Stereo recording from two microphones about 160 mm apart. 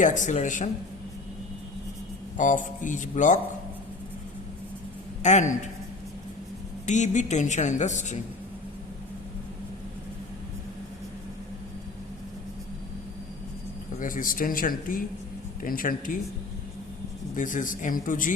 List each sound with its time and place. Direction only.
0.0 s a woman's voice: 50° left (ahead or behind)
2.4 s a woman's voice: 55° left (ahead or behind)
5.2 s a woman's voice: 50° left (ahead or behind)
6.8 s a woman's voice: 50° left (ahead or behind)
14.0 s speech: 55° left (ahead or behind)
17.3 s speech: 55° left (ahead or behind)